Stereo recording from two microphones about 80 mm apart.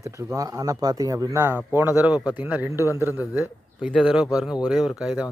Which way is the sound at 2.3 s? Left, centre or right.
Right.